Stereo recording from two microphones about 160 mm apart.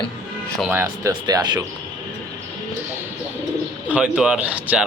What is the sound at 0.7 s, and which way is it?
Speech, 15° right (ahead or behind).